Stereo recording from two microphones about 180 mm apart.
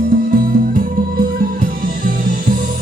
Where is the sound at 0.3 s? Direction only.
55° right (ahead or behind).